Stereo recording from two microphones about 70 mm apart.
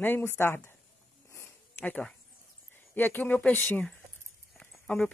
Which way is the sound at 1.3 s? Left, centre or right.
Left.